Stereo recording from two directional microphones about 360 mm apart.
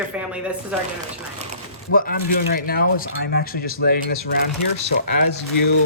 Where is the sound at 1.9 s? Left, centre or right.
Left.